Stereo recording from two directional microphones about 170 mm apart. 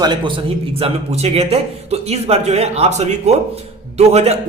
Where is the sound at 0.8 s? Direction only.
35° right (ahead or behind).